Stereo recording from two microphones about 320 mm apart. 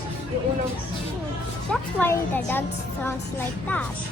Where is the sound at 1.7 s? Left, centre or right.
Centre.